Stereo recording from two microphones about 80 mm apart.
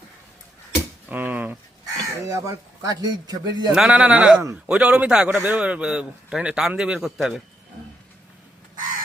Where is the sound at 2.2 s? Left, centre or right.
Right.